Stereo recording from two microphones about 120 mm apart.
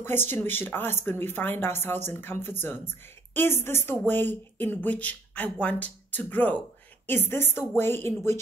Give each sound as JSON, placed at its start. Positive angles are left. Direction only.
{"t": 0.0, "sound": "a woman's voice", "side_deg": 20}